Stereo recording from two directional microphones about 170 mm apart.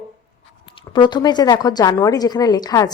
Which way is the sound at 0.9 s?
25° left (ahead or behind).